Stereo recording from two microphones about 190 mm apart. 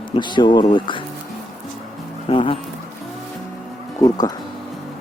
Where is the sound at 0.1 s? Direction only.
25° left (ahead or behind).